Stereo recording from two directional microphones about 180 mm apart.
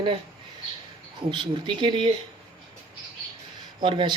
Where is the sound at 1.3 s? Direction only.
25° right (ahead or behind).